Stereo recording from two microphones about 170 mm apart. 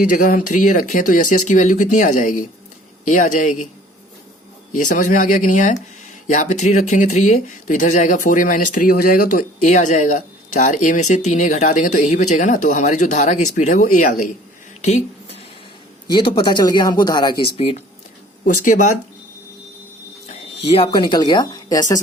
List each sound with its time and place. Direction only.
0.1 s speech: 50° left (ahead or behind)
4.7 s speech: 45° left (ahead or behind)
14.8 s a sound: 40° left (ahead or behind)
16.0 s speech: 30° left (ahead or behind)
18.4 s speech: 50° left (ahead or behind)
20.7 s speech: 35° left (ahead or behind)